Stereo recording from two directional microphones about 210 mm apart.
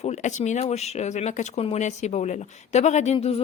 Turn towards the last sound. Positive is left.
turn(degrees=30)  # may be behind; listen again after turning